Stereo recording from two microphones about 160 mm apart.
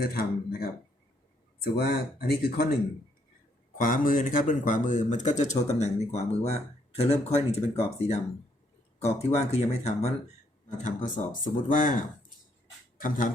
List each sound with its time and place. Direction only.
0.0 s speech: 70° left (ahead or behind)
1.6 s speech: 80° left
3.8 s speech: 60° left (ahead or behind)